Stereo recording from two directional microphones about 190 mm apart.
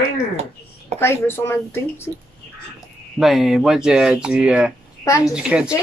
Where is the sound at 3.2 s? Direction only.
Centre (ahead or behind).